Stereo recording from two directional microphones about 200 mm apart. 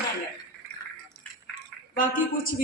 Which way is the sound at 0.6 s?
10° right (ahead or behind).